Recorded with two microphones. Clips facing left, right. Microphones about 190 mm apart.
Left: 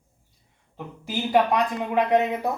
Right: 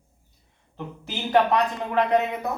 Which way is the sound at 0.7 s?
10° left (ahead or behind).